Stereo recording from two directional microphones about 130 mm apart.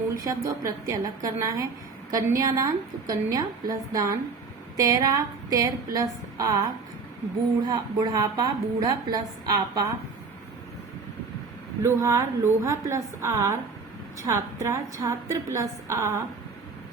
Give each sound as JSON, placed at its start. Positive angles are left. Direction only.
{"t": 0.2, "sound": "a woman's voice", "side_deg": -25}
{"t": 7.7, "sound": "a woman's voice", "side_deg": -30}
{"t": 11.8, "sound": "a woman's voice", "side_deg": -20}